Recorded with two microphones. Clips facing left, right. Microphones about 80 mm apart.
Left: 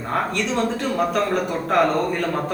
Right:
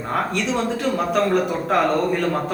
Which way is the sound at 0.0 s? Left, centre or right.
Centre.